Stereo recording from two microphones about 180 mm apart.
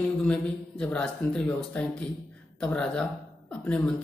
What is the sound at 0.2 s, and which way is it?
A woman's voice, 5° left (ahead or behind).